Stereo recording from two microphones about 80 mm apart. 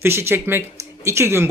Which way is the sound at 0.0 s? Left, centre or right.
Right.